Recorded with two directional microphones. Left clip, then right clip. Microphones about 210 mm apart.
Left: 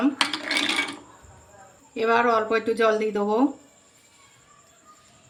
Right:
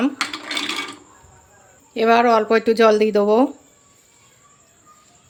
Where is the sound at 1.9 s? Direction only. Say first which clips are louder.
Right 6 dB; 45° right (ahead or behind).